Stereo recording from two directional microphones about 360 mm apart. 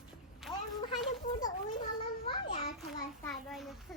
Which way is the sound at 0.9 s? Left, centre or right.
Left.